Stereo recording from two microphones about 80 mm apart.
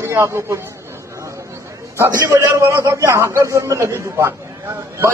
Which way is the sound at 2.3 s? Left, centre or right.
Right.